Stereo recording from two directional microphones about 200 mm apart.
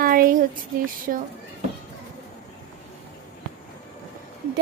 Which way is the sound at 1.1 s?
50° right (ahead or behind).